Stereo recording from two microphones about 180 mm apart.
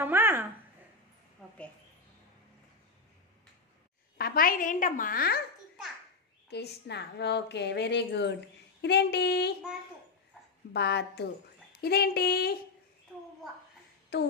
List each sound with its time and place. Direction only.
0.0 s a sound: 10° right (ahead or behind)
1.4 s a woman's voice: 5° left (ahead or behind)
4.2 s a woman's voice: 55° left (ahead or behind)
6.5 s a woman's voice: 65° left (ahead or behind)
8.8 s female singing: 70° left (ahead or behind)
10.7 s a woman's voice: 65° left (ahead or behind)
11.8 s female singing: 60° left (ahead or behind)
14.1 s a sound: 65° left (ahead or behind)